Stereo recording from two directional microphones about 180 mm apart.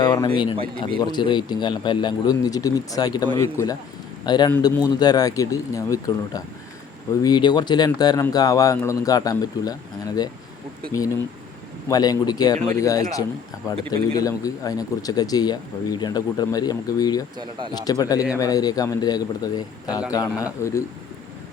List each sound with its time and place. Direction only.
0.0 s a sound: 20° left (ahead or behind)
0.8 s a man's voice: 25° left (ahead or behind)
11.9 s a man's voice: 20° left (ahead or behind)
17.3 s speech: 25° right (ahead or behind)
17.8 s a man's voice: 20° left (ahead or behind)